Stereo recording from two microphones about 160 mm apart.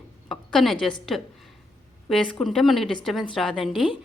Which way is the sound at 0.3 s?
Centre (ahead or behind).